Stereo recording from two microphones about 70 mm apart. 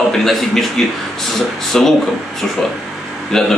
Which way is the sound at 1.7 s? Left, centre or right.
Centre.